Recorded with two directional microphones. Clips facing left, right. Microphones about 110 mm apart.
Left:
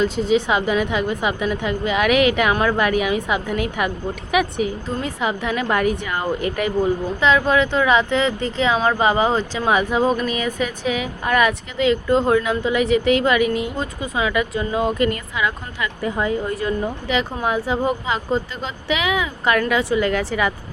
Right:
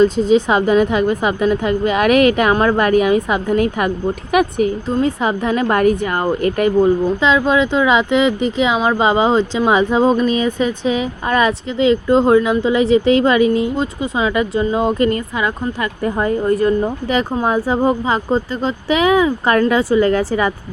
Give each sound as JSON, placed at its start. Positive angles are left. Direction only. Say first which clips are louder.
{"t": 0.0, "sound": "a woman's voice", "louder": "right 6 dB", "side_deg": -35}
{"t": 7.2, "sound": "a woman's voice", "louder": "right 2 dB", "side_deg": -20}